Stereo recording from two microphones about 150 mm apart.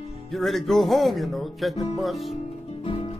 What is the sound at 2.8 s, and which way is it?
Music, 40° left (ahead or behind).